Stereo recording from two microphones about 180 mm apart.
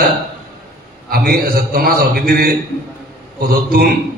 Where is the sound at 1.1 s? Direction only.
55° right (ahead or behind).